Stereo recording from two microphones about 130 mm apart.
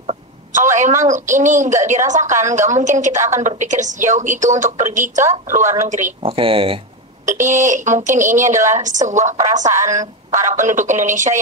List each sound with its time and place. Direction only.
0.0 s a sound: 65° right (ahead or behind)
1.0 s a woman's voice: 70° right (ahead or behind)
3.2 s a woman's voice: 20° right (ahead or behind)
3.4 s a woman's voice: 70° right (ahead or behind)
6.2 s speech: 45° right (ahead or behind)
7.2 s a woman's voice: 75° right (ahead or behind)